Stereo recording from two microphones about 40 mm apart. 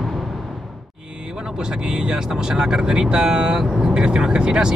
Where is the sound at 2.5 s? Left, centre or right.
Centre.